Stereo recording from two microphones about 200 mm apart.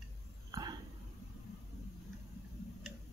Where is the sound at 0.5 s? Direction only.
20° right (ahead or behind).